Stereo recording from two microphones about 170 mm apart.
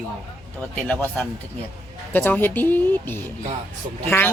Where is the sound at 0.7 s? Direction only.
10° left (ahead or behind).